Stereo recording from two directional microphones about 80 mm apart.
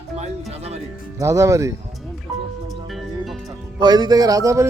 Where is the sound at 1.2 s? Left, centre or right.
Right.